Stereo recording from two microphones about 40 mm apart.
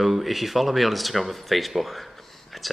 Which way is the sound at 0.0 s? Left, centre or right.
Centre.